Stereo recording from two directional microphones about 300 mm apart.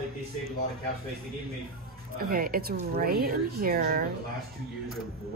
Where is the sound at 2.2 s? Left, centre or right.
Right.